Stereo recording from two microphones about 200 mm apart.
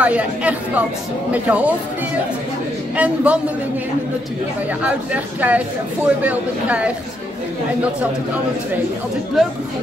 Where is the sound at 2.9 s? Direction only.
5° right (ahead or behind).